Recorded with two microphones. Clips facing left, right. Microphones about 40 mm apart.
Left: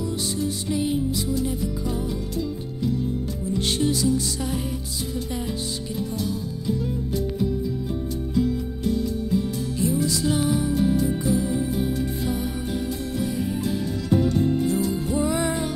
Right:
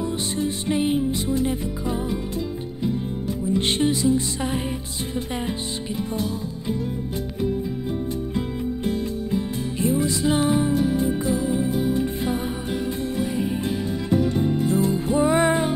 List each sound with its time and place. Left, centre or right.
0.0 s music: right
3.5 s music: right
9.3 s music: right
10.7 s music: right
11.3 s music: right